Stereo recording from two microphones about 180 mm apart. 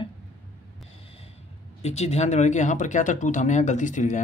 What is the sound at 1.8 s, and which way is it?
Speech, 35° left (ahead or behind).